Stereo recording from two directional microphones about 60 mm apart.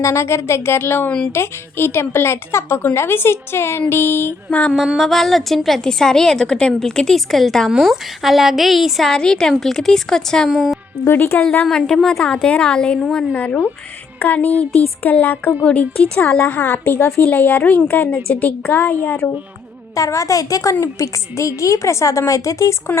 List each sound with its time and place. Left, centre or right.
0.0 s speech: left
4.9 s a woman's voice: centre
10.5 s a woman's voice: centre
11.0 s a woman's voice: left
11.8 s a woman's voice: centre; by 15.5 s left
15.6 s speech: centre
16.9 s speech: left
17.3 s speech: left
20.0 s a woman's voice: left
20.8 s a woman's voice: left